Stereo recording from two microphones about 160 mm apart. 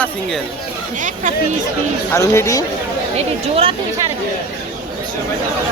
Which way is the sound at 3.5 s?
35° right (ahead or behind).